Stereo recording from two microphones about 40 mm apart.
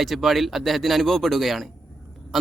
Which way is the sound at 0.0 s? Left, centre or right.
Centre.